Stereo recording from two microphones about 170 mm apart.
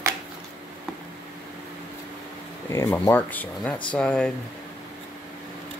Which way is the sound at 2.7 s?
15° left (ahead or behind).